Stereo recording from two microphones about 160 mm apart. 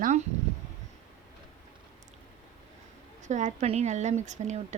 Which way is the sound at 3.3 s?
50° right (ahead or behind).